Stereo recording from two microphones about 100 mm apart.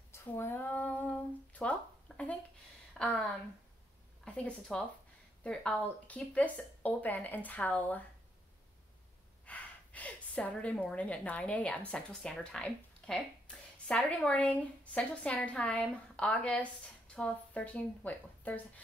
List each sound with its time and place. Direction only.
0.1 s female singing: 25° left (ahead or behind)
1.5 s a sound: 15° left (ahead or behind)
4.2 s a woman's voice: 10° left (ahead or behind)
9.5 s a woman's voice: 15° left (ahead or behind)